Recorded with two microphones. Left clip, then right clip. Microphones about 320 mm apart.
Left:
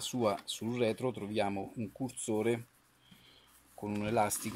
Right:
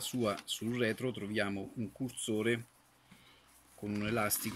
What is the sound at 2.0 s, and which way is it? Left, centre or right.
Speech, centre.